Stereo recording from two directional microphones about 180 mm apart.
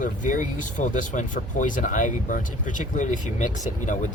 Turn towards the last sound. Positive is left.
turn(degrees=45)  # may be behind; listen again after turning